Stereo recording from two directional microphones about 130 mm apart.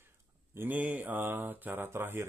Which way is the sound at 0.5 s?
15° right (ahead or behind).